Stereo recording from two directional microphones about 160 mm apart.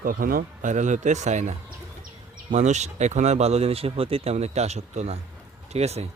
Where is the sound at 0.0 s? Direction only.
60° right (ahead or behind).